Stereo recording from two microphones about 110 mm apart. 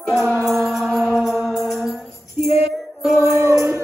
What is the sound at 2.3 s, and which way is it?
Female singing, 70° left (ahead or behind).